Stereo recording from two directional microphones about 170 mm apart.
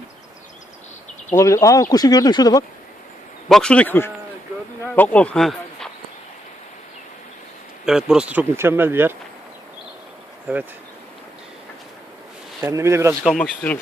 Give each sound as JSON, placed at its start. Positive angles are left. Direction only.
{"t": 1.4, "sound": "speech", "side_deg": 20}
{"t": 3.5, "sound": "a man's voice", "side_deg": 5}
{"t": 7.9, "sound": "speech", "side_deg": -5}
{"t": 12.6, "sound": "speech", "side_deg": -15}
{"t": 13.2, "sound": "speech", "side_deg": 5}